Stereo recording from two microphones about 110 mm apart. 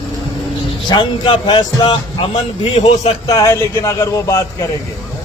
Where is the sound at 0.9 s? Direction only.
40° left (ahead or behind).